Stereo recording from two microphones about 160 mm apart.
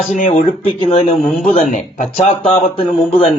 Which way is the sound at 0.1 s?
50° left (ahead or behind).